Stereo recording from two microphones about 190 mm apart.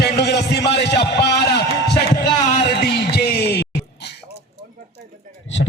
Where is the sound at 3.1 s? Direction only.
55° left (ahead or behind).